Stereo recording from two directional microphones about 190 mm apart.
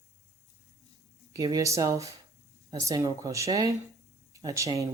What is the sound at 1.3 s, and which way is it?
Speech, 20° right (ahead or behind).